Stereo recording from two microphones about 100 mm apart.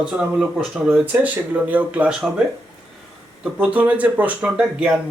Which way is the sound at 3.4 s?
10° right (ahead or behind).